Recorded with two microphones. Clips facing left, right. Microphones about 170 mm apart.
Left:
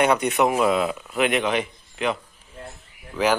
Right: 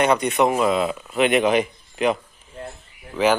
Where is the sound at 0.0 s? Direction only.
10° left (ahead or behind).